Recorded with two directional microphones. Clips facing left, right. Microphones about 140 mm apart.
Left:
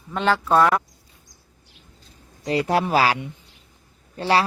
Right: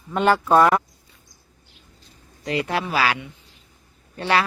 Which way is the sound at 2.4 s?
35° left (ahead or behind).